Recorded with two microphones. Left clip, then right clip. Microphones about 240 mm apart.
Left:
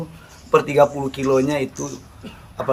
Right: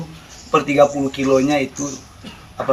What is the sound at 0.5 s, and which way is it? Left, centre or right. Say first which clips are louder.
A man's voice: right 1 dB; left.